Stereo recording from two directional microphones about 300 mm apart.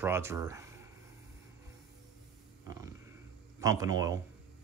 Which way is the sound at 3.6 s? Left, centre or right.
Centre.